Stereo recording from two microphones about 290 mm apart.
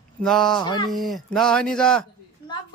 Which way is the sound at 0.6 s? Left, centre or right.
Centre.